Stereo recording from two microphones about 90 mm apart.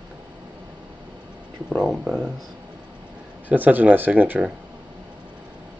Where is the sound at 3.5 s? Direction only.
20° right (ahead or behind).